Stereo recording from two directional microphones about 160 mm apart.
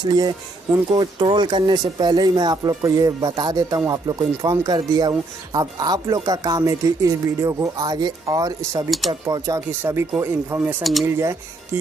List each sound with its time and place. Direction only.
0.0 s speech: 25° right (ahead or behind)
10.8 s speech: centre (ahead or behind)
11.1 s speech: 15° right (ahead or behind)